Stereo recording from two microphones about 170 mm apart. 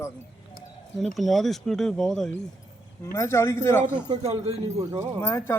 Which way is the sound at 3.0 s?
15° left (ahead or behind).